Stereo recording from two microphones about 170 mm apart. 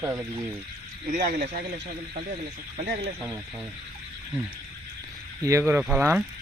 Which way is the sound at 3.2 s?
15° right (ahead or behind).